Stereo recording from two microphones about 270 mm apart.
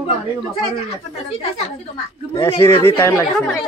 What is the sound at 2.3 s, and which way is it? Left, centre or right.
Speech, centre.